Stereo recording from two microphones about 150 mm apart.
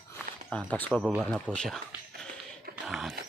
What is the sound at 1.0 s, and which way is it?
Speech, 5° right (ahead or behind).